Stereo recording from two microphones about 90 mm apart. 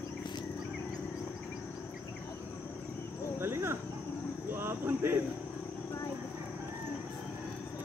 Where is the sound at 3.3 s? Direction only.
25° right (ahead or behind).